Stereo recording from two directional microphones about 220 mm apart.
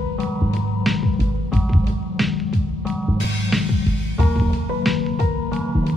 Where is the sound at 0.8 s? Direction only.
Centre (ahead or behind).